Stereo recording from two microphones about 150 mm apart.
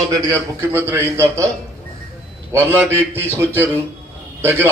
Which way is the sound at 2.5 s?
15° right (ahead or behind).